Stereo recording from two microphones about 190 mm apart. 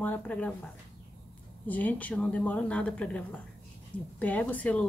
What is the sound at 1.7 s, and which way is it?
Speech, 10° left (ahead or behind).